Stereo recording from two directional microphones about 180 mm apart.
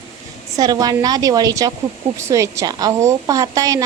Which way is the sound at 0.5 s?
20° right (ahead or behind).